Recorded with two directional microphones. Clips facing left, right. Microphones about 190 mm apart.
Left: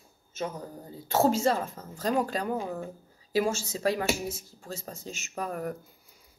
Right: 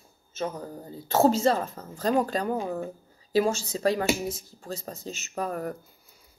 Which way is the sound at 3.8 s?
10° left (ahead or behind).